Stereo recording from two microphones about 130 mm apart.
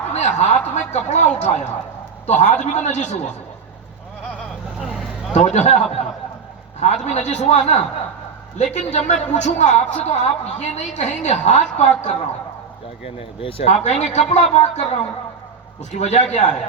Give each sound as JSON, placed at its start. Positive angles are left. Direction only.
{"t": 0.1, "sound": "a man's voice", "side_deg": 60}
{"t": 4.8, "sound": "vehicle", "side_deg": 0}
{"t": 5.3, "sound": "a man's voice", "side_deg": 60}
{"t": 13.1, "sound": "speech", "side_deg": 45}
{"t": 13.8, "sound": "a man's voice", "side_deg": 60}
{"t": 16.0, "sound": "a man's voice", "side_deg": 60}